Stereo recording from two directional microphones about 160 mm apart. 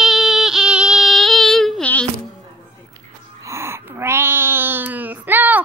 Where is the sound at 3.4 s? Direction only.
15° right (ahead or behind).